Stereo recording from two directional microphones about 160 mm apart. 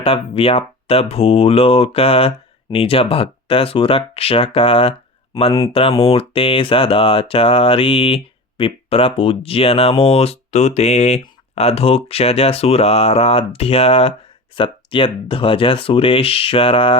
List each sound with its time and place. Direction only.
0.0 s speech: 35° left (ahead or behind)